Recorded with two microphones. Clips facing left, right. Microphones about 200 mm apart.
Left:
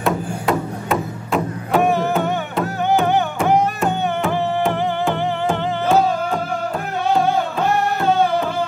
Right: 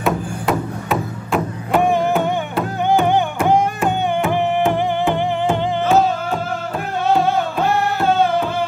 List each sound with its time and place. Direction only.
0.0 s music: centre (ahead or behind)
1.8 s music: 15° right (ahead or behind)
4.3 s music: 15° right (ahead or behind)